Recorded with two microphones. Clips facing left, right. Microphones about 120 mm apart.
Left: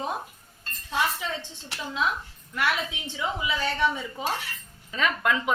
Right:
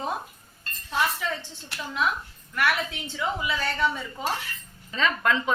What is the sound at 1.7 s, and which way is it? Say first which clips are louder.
A woman's voice: right 1 dB; 20° left (ahead or behind).